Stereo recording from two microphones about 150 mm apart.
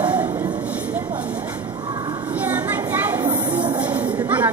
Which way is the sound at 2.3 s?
10° right (ahead or behind).